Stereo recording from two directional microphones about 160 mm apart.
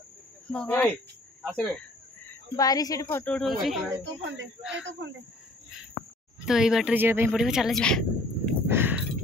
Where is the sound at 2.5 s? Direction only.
25° left (ahead or behind); by 4.8 s 5° right (ahead or behind).